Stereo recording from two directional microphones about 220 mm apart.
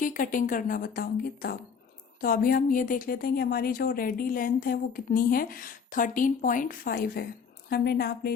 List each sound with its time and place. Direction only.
0.0 s a woman's voice: 40° left (ahead or behind)